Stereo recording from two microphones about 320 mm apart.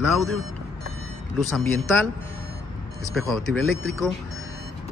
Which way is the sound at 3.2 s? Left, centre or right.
Centre.